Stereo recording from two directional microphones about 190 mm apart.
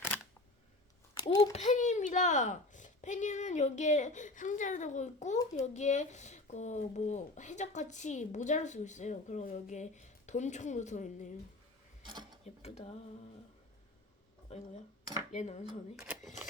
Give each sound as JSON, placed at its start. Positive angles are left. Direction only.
{"t": 1.2, "sound": "a child's voice", "side_deg": 20}
{"t": 1.5, "sound": "speech", "side_deg": 40}
{"t": 12.0, "sound": "mechanisms", "side_deg": -25}
{"t": 12.5, "sound": "speech", "side_deg": 35}
{"t": 14.5, "sound": "speech", "side_deg": 35}